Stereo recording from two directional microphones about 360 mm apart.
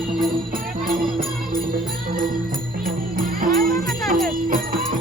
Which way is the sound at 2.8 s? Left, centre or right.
Right.